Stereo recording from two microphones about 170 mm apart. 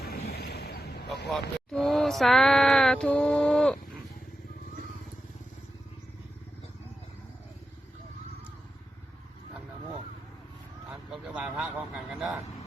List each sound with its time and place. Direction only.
0.3 s vehicle: 70° left (ahead or behind)
1.3 s speech: centre (ahead or behind)
11.3 s a sound: 5° right (ahead or behind)